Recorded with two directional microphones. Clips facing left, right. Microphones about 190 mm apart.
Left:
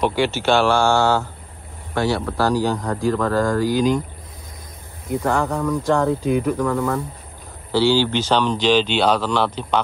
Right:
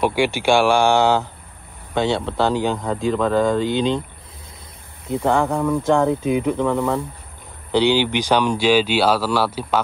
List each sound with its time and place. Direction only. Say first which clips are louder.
0.0 s speech: right 1 dB; 10° right (ahead or behind)
5.0 s speech: right 2 dB; 25° right (ahead or behind); by 9.8 s 5° right (ahead or behind)